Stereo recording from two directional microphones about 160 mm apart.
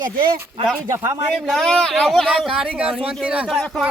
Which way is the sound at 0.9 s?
15° right (ahead or behind).